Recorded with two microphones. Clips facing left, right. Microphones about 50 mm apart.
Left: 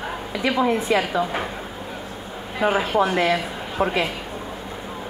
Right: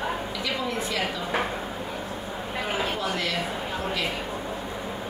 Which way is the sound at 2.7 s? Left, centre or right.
Left.